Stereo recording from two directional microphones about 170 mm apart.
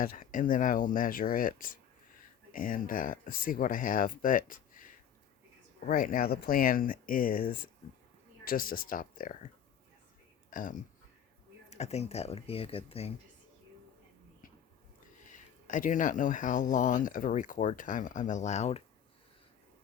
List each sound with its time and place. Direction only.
0.0 s speech: 55° left (ahead or behind)
8.4 s speech: 55° left (ahead or behind)
10.5 s speech: 50° left (ahead or behind)
11.7 s speech: 40° left (ahead or behind)
15.3 s speech: 50° left (ahead or behind)